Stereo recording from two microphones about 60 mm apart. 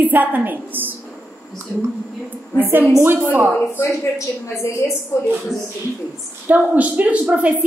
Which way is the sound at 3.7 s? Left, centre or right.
Left.